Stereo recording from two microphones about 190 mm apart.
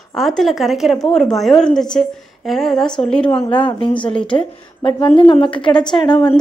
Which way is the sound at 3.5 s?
25° left (ahead or behind).